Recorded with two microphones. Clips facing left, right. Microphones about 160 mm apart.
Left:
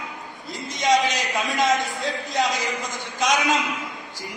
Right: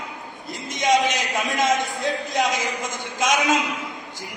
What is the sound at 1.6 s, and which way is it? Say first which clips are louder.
A man's voice: even; 20° right (ahead or behind).